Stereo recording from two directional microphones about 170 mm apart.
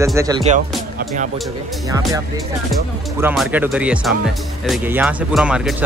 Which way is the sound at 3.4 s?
10° right (ahead or behind).